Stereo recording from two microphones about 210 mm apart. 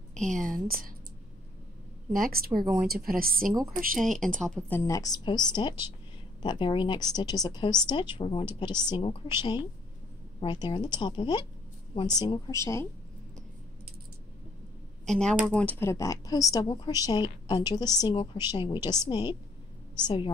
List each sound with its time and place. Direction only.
0.3 s speech: 40° right (ahead or behind)
2.1 s speech: 45° right (ahead or behind)
2.5 s speech: 20° right (ahead or behind)
2.9 s speech: 45° right (ahead or behind)
4.0 s speech: centre (ahead or behind)
15.0 s speech: 5° left (ahead or behind); by 20.3 s 25° left (ahead or behind)